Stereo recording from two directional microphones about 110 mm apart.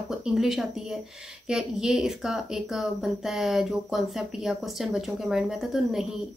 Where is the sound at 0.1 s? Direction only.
5° right (ahead or behind).